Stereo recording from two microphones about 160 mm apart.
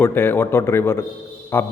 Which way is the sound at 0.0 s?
15° left (ahead or behind).